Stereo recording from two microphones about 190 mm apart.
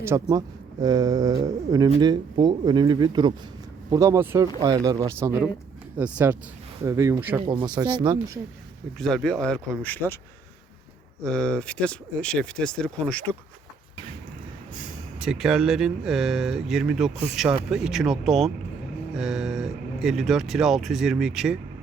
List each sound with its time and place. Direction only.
0.0 s speech: 15° right (ahead or behind)
7.4 s speech: 25° right (ahead or behind)
9.0 s speech: centre (ahead or behind)
11.2 s speech: 5° left (ahead or behind)
15.2 s speech: 5° right (ahead or behind)